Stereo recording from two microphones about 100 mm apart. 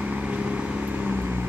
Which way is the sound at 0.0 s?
10° right (ahead or behind).